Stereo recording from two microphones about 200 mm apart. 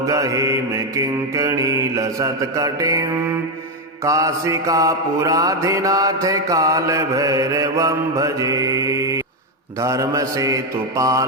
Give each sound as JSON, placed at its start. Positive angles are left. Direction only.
{"t": 0.0, "sound": "mantra", "side_deg": -15}